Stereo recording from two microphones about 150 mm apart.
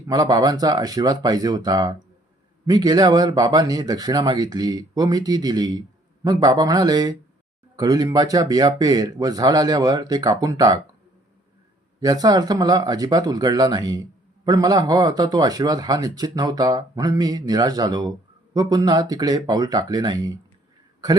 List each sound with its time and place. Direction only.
0.1 s speech: 25° right (ahead or behind)
11.9 s speech: 25° right (ahead or behind)